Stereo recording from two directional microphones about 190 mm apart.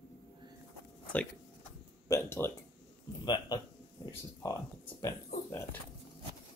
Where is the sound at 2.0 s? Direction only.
15° left (ahead or behind).